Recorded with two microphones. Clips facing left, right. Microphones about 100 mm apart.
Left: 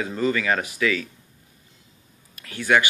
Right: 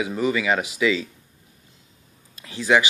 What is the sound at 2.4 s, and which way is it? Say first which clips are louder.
Speech: right 1 dB; 20° right (ahead or behind).